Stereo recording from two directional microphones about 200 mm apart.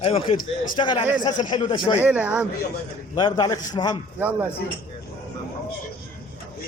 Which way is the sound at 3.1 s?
20° left (ahead or behind).